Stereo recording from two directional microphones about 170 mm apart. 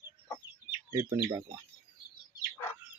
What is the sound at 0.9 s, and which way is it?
Speech, 15° right (ahead or behind).